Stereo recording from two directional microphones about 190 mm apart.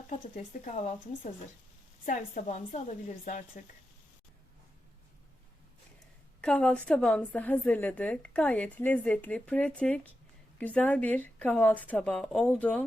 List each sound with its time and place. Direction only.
0.1 s speech: 35° left (ahead or behind)
6.4 s a woman's voice: 5° left (ahead or behind)